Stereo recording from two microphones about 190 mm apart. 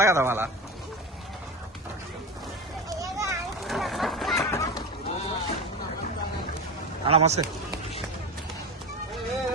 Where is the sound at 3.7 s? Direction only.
Centre (ahead or behind).